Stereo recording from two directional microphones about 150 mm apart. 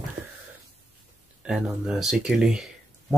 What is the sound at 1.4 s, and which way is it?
Speech, 5° right (ahead or behind).